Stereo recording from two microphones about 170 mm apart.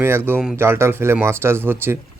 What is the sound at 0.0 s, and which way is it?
Speech, 15° right (ahead or behind).